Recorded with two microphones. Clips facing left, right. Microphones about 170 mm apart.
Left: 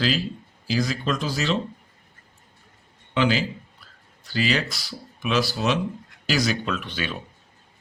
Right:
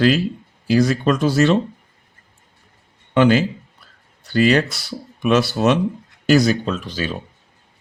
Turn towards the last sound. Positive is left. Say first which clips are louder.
# right 5 dB
turn(degrees=-40)  # may be behind; listen again after turning